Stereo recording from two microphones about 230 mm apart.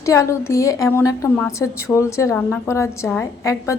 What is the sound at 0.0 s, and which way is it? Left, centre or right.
A woman's voice, centre.